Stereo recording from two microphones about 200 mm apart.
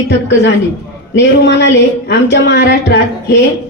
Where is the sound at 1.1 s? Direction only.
60° left (ahead or behind).